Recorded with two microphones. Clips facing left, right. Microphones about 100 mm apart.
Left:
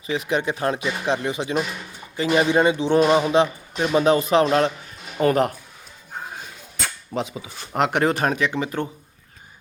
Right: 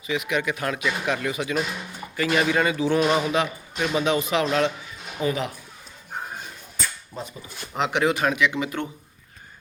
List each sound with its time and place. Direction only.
0.1 s speech: 35° left (ahead or behind)
5.2 s speech: 55° left (ahead or behind)
6.7 s a sound: 85° left
7.7 s speech: 50° left (ahead or behind)